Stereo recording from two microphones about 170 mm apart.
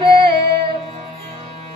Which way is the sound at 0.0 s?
30° right (ahead or behind).